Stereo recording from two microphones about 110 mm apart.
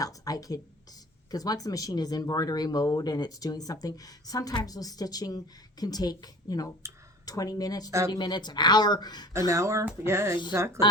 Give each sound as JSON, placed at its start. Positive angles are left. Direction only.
{"t": 0.0, "sound": "a woman's voice", "side_deg": 35}
{"t": 7.9, "sound": "speech", "side_deg": -25}
{"t": 8.1, "sound": "speech", "side_deg": 40}
{"t": 9.5, "sound": "speech", "side_deg": -30}